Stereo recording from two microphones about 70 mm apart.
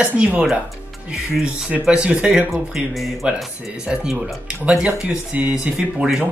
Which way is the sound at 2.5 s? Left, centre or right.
Centre.